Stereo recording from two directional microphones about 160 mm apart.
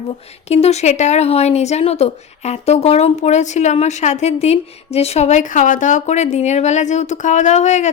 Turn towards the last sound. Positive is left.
turn(degrees=45)  # may be behind; listen again after turning